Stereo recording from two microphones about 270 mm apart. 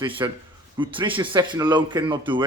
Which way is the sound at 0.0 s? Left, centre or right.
Centre.